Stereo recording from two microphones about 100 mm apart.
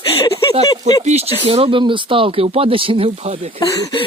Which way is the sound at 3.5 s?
35° left (ahead or behind).